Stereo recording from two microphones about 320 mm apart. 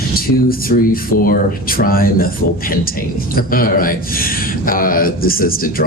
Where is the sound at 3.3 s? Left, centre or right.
Left.